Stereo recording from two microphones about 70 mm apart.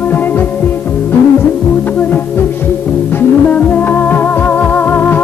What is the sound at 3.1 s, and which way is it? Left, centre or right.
Music, left.